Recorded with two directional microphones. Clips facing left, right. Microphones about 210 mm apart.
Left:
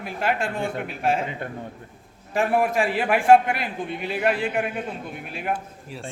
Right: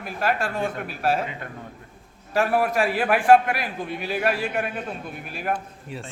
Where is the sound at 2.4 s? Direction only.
20° left (ahead or behind).